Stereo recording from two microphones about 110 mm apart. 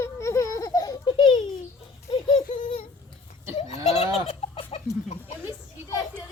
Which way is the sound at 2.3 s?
90° left.